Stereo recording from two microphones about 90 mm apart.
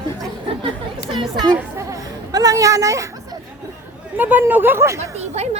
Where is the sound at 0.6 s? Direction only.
70° right (ahead or behind).